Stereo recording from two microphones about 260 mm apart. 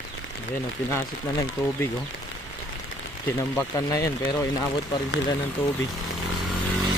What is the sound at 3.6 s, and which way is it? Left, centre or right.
Speech, centre.